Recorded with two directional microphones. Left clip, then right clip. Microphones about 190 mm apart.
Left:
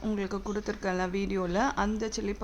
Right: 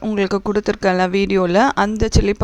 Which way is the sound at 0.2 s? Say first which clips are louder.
Right 15 dB; 45° right (ahead or behind).